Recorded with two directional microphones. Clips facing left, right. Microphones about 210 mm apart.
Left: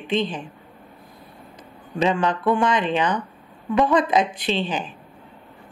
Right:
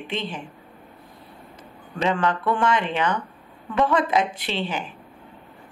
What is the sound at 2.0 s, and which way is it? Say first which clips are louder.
Speech: left 2 dB; 20° left (ahead or behind).